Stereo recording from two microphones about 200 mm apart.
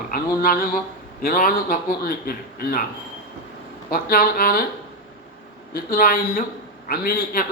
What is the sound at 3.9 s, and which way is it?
Speech, 50° left (ahead or behind).